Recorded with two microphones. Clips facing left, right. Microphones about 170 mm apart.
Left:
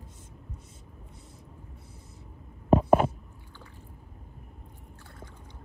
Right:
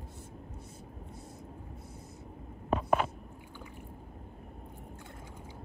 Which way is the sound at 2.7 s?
30° left (ahead or behind).